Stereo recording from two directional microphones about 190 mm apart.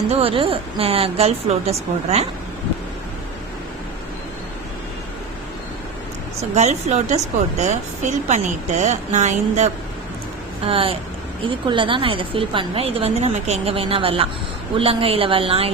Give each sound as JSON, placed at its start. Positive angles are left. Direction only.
{"t": 0.1, "sound": "a woman's voice", "side_deg": -30}
{"t": 6.5, "sound": "a woman's voice", "side_deg": -35}
{"t": 10.7, "sound": "a woman's voice", "side_deg": -30}